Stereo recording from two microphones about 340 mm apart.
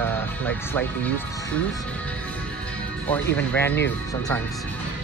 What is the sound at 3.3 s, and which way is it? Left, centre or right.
Speech, centre.